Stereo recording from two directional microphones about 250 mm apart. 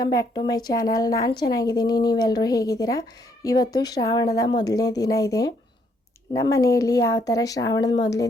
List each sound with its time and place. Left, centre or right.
0.0 s a woman's voice: centre